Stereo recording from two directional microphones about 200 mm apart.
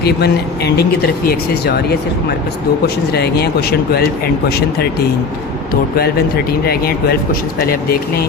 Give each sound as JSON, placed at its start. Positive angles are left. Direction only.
{"t": 0.0, "sound": "speech", "side_deg": 55}
{"t": 6.7, "sound": "speech", "side_deg": 50}